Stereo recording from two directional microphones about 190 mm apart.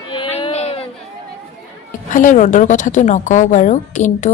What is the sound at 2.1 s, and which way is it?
A woman's voice, 40° left (ahead or behind).